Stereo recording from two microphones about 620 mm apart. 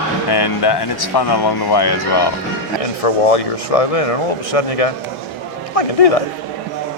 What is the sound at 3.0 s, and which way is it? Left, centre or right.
Speech, left.